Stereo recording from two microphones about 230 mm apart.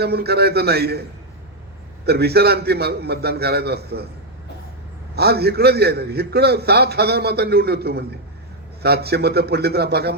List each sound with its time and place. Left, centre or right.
0.0 s a man's voice: right
2.0 s a man's voice: right
5.1 s a man's voice: right